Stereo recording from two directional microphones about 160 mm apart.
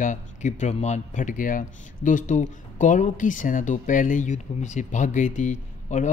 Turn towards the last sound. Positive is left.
turn(degrees=50)  # may be behind; listen again after turning